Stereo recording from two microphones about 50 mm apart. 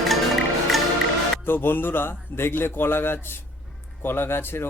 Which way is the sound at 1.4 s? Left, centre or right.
Left.